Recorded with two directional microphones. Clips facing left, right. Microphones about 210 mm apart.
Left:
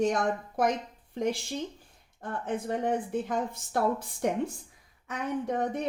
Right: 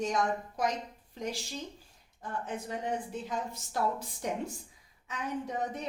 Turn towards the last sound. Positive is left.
turn(degrees=55)  # may be behind; listen again after turning